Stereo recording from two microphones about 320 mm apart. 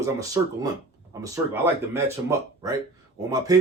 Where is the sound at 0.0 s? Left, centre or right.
Centre.